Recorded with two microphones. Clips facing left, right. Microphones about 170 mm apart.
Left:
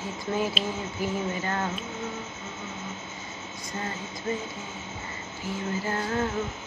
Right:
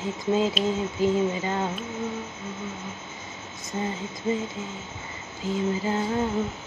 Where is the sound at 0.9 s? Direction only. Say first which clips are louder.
Right 6 dB; 15° right (ahead or behind).